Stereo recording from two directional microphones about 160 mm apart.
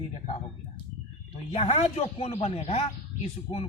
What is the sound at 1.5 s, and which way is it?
A man's voice, 40° left (ahead or behind).